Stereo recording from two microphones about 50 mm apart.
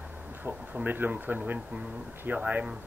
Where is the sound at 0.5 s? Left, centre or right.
Right.